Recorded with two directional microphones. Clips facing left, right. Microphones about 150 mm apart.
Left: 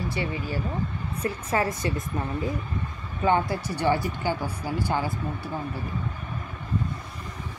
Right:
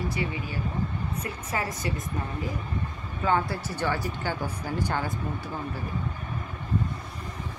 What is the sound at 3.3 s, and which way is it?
Speech, 15° left (ahead or behind).